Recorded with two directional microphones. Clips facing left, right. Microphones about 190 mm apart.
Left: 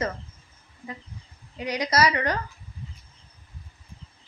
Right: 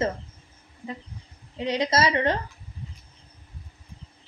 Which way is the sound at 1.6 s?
25° right (ahead or behind).